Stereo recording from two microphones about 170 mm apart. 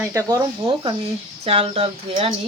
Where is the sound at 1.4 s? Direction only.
35° right (ahead or behind).